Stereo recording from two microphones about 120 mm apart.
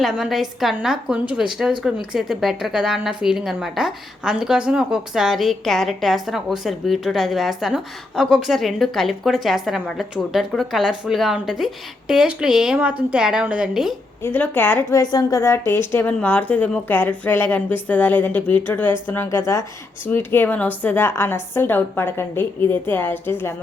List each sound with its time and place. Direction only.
0.0 s a woman's voice: centre (ahead or behind)
14.2 s a woman's voice: 15° left (ahead or behind)
14.9 s a woman's voice: 30° left (ahead or behind)